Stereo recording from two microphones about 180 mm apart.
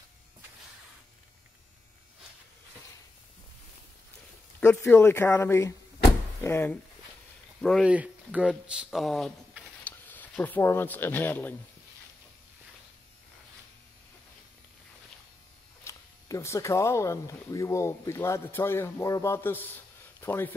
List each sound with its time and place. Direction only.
4.9 s speech: 15° left (ahead or behind)
7.6 s speech: centre (ahead or behind)
9.8 s speech: 10° left (ahead or behind)
15.8 s speech: 15° left (ahead or behind)